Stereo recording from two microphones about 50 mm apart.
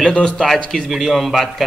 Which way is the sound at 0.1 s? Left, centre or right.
Centre.